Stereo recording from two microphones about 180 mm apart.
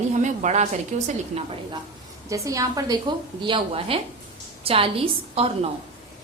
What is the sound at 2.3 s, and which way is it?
A woman's voice, 20° right (ahead or behind).